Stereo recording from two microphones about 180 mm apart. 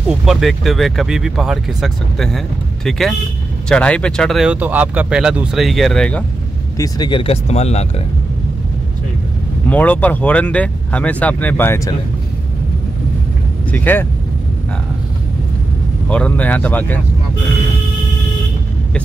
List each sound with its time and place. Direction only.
0.2 s speech: centre (ahead or behind)
6.8 s speech: 25° left (ahead or behind)
9.7 s speech: 10° left (ahead or behind)
13.7 s speech: 10° left (ahead or behind)
16.1 s speech: 5° left (ahead or behind)